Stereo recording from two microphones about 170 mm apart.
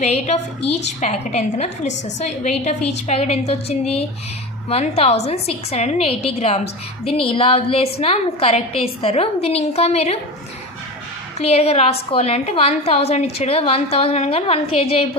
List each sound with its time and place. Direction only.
0.0 s a woman's voice: 40° left (ahead or behind)
11.3 s a woman's voice: 35° left (ahead or behind)